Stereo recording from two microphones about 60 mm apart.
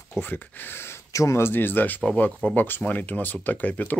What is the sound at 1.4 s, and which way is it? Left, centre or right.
Speech, left.